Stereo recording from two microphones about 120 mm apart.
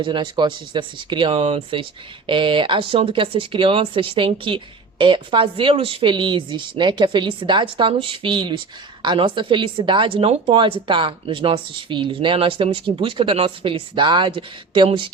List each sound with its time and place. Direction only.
0.0 s a woman's voice: 40° right (ahead or behind)